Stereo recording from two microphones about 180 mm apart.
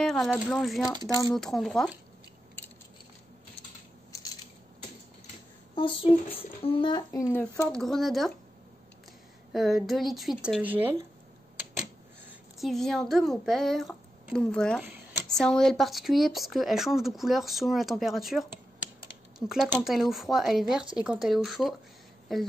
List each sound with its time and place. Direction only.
0.0 s speech: centre (ahead or behind)
5.8 s speech: 30° left (ahead or behind)
7.1 s speech: 15° left (ahead or behind)
7.7 s speech: centre (ahead or behind)
9.5 s speech: centre (ahead or behind)
12.5 s speech: centre (ahead or behind)
19.8 s speech: centre (ahead or behind)